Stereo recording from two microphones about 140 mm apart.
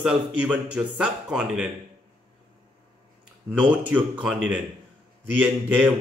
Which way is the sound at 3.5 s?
10° right (ahead or behind).